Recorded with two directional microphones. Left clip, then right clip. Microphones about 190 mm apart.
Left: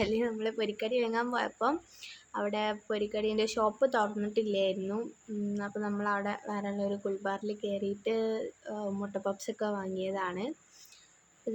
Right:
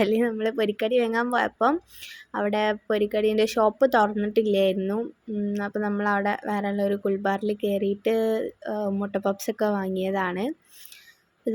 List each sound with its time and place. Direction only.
0.0 s speech: 30° right (ahead or behind)